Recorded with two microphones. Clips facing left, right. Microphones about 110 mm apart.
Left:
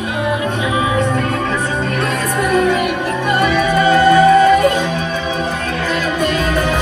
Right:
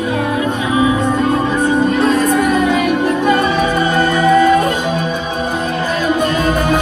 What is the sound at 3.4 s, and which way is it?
Music, 20° right (ahead or behind).